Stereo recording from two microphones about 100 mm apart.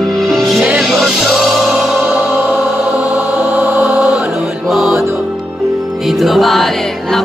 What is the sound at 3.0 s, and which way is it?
Music, 20° right (ahead or behind).